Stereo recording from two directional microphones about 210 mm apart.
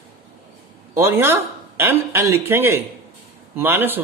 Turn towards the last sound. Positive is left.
turn(degrees=-10)  # may be behind; listen again after turning